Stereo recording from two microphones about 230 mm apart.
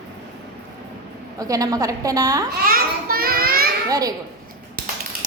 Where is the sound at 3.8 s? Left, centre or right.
Centre.